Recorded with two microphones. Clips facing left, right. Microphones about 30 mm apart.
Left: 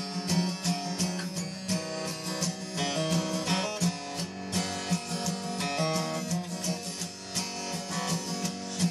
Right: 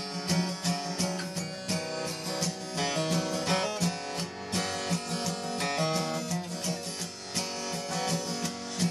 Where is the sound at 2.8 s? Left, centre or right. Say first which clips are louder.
Even; right.